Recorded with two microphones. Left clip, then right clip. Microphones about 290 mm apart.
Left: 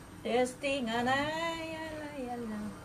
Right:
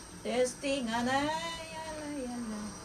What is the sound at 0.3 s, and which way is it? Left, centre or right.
Speech, left.